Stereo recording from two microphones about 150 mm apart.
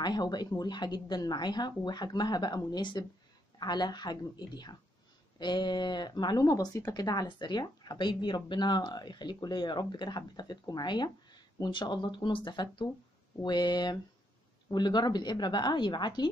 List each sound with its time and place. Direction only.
0.0 s speech: 30° left (ahead or behind)